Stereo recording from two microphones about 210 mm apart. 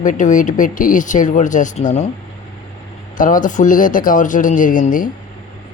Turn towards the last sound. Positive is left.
turn(degrees=40)  # may be behind; listen again after turning